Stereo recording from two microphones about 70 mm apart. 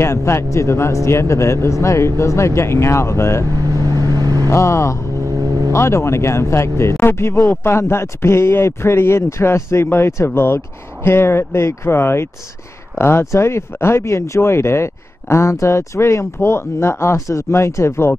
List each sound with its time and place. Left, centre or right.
0.0 s speech: left
3.7 s vehicle: right
4.5 s speech: left